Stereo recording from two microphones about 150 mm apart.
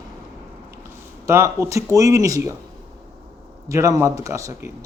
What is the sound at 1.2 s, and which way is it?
A man's voice, 20° right (ahead or behind).